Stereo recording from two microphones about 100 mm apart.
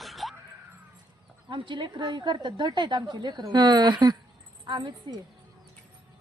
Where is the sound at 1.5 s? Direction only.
55° right (ahead or behind).